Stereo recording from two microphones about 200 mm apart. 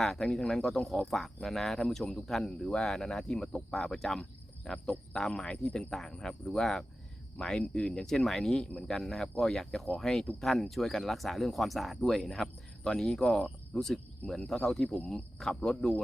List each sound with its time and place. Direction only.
0.0 s speech: centre (ahead or behind)